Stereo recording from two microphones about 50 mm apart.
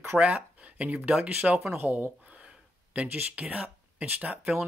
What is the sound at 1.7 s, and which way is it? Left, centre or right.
Speech, right.